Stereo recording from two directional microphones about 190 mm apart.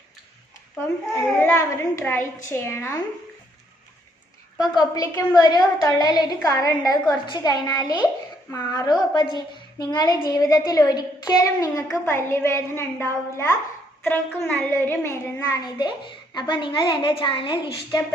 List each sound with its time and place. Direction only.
1.4 s a woman's voice: 10° left (ahead or behind)
4.5 s a woman's voice: 20° left (ahead or behind)